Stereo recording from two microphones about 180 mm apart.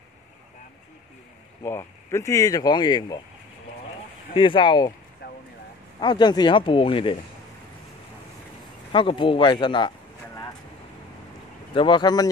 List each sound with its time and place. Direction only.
1.6 s speech: 15° left (ahead or behind)
4.3 s speech: 30° left (ahead or behind)
5.2 s vehicle: 70° left (ahead or behind)
5.9 s speech: 25° left (ahead or behind)
8.9 s speech: 30° left (ahead or behind)
11.7 s speech: 25° left (ahead or behind)